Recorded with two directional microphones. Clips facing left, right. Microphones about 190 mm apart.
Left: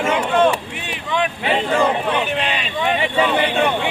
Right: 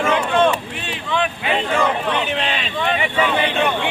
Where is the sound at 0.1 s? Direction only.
10° left (ahead or behind).